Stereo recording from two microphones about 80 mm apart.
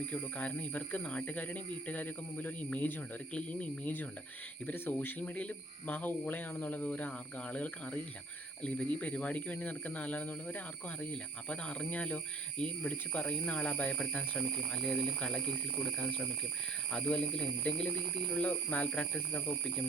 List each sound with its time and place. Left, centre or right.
0.1 s speech: centre
16.9 s speech: centre